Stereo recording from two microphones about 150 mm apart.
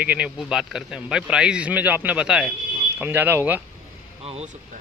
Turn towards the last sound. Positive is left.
turn(degrees=-40)  # may be behind; listen again after turning